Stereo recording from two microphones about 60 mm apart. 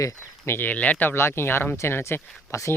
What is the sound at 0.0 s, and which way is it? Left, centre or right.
Speech, left.